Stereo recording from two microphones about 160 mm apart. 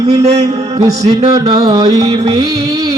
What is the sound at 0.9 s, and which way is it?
Music, 25° right (ahead or behind).